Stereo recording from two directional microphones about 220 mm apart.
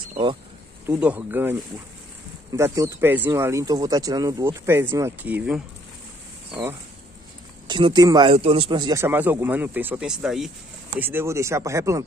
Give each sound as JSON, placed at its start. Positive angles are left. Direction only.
{"t": 0.1, "sound": "speech", "side_deg": -25}
{"t": 0.8, "sound": "speech", "side_deg": -5}
{"t": 7.6, "sound": "speech", "side_deg": -20}